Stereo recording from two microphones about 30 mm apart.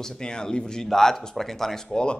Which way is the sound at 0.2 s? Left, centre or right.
Left.